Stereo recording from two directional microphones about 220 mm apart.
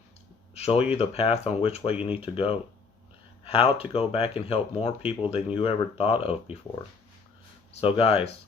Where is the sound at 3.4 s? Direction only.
25° left (ahead or behind).